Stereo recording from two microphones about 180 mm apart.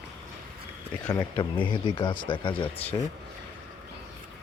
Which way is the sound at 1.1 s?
25° left (ahead or behind).